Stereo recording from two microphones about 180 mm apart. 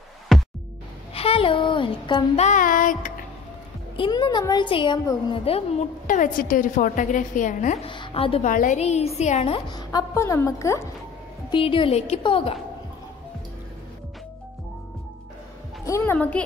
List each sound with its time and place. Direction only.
0.3 s music: centre (ahead or behind)
1.1 s speech: 30° left (ahead or behind)
2.4 s a woman's voice: 45° left (ahead or behind)
3.9 s a woman's voice: 25° left (ahead or behind)
6.0 s a woman's voice: 50° left (ahead or behind)
7.8 s a woman's voice: 30° left (ahead or behind)
8.5 s a woman's voice: 45° left (ahead or behind)
9.7 s a woman's voice: 20° left (ahead or behind)
11.5 s a woman's voice: 30° left (ahead or behind)
15.8 s a woman's voice: 15° left (ahead or behind)